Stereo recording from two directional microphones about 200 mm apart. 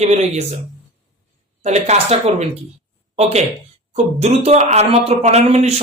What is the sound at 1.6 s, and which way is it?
Speech, 35° right (ahead or behind).